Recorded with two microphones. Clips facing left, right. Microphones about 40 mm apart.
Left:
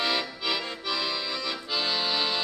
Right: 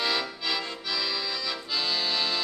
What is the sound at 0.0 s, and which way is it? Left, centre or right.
Accordion, centre.